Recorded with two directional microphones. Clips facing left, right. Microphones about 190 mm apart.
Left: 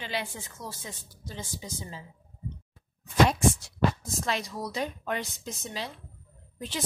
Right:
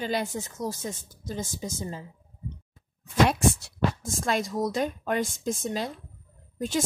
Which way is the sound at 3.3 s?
60° right (ahead or behind).